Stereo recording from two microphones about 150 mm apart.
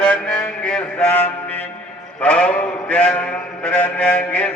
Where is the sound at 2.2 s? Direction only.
10° left (ahead or behind).